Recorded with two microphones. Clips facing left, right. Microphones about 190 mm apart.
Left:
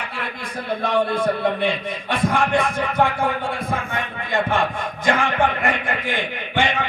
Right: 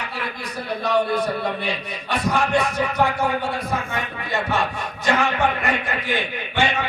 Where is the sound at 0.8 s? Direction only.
50° left (ahead or behind).